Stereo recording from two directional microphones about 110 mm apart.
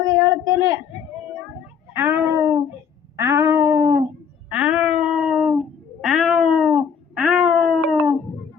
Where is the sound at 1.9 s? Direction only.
25° right (ahead or behind).